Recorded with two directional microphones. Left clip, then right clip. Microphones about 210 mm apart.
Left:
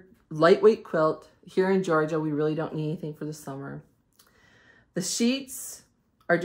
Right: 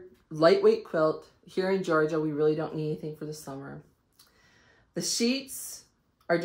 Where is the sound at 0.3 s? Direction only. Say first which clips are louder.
Left 2 dB; 40° left (ahead or behind).